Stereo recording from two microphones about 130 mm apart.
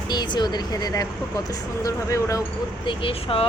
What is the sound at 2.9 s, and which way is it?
Speech, 45° left (ahead or behind).